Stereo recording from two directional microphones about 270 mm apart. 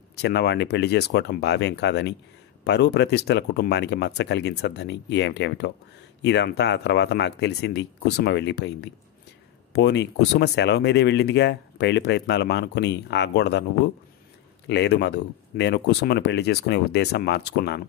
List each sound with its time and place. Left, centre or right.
0.1 s speech: left
14.7 s speech: left